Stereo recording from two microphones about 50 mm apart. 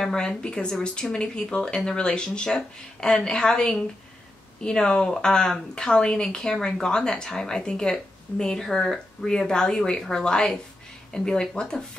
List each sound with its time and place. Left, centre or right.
0.0 s speech: centre